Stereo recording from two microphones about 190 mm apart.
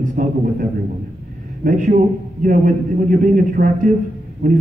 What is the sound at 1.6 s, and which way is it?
Speech, 45° right (ahead or behind).